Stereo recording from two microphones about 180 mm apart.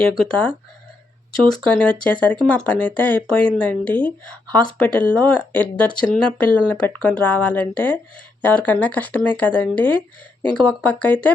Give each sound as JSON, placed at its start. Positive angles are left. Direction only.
{"t": 0.0, "sound": "speech", "side_deg": 5}